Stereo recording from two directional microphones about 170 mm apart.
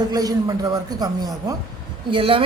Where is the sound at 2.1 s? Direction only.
30° right (ahead or behind).